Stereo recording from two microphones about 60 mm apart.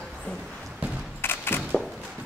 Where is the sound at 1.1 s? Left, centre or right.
Left.